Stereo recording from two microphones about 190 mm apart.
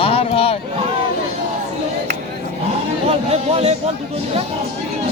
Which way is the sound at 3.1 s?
30° right (ahead or behind).